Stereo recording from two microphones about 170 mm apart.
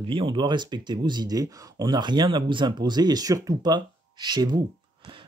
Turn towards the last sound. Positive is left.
turn(degrees=-25)  # may be behind; listen again after turning